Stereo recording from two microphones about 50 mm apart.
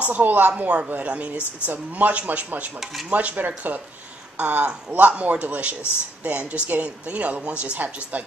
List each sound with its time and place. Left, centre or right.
0.0 s a man's voice: right
2.8 s speech: centre
3.1 s a man's voice: right